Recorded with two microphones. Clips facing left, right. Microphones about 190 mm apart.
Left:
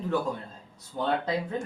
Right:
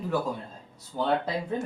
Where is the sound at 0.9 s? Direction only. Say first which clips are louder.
Right 1 dB; 5° right (ahead or behind).